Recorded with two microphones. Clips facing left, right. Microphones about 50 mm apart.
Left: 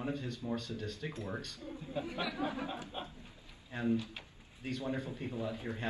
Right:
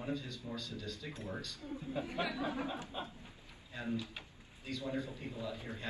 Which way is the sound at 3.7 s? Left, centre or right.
Left.